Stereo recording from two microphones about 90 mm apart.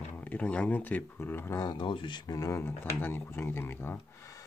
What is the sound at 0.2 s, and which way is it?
Speech, 15° left (ahead or behind).